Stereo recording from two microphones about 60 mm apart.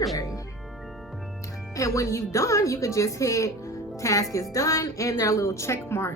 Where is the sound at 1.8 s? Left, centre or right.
Left.